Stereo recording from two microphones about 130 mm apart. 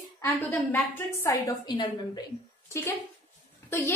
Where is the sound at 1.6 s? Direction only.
35° left (ahead or behind).